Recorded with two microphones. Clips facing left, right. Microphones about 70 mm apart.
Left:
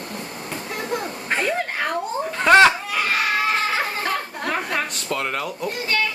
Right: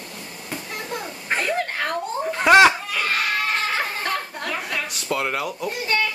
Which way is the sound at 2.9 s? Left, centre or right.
Centre.